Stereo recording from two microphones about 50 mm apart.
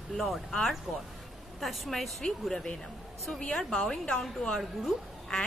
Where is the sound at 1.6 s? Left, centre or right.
Centre.